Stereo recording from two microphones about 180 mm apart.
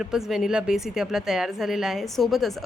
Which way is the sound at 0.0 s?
Centre (ahead or behind).